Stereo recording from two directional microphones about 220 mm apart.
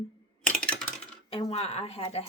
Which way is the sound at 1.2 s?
25° left (ahead or behind).